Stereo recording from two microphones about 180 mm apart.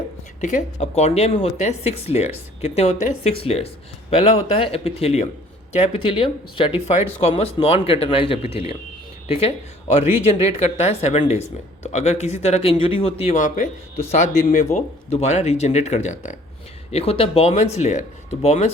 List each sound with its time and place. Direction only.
0.4 s speech: 40° left (ahead or behind)